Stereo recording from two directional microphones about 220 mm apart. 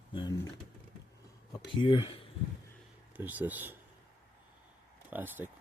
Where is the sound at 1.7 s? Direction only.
20° left (ahead or behind).